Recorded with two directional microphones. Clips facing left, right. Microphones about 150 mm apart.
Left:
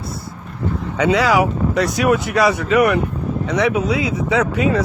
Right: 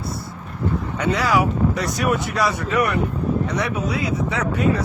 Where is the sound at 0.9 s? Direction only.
90° left.